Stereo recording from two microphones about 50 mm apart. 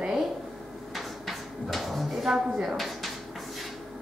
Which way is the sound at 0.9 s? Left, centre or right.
Centre.